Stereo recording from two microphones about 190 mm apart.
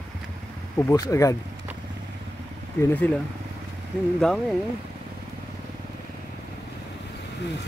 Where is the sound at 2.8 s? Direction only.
10° left (ahead or behind).